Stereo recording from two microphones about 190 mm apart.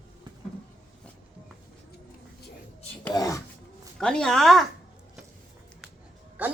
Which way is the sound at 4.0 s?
5° left (ahead or behind).